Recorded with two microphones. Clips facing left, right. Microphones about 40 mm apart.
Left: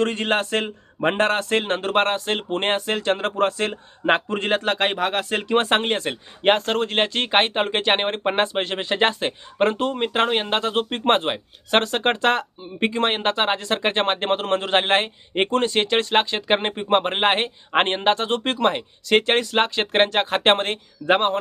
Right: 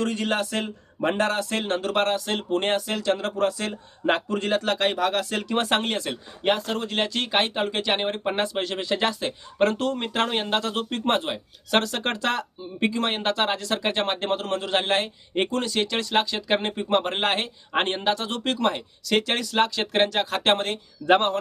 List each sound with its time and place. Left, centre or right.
0.0 s speech: left
21.1 s a man's voice: left